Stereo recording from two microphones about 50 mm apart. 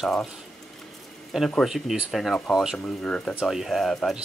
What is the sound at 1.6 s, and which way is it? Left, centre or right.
Speech, centre.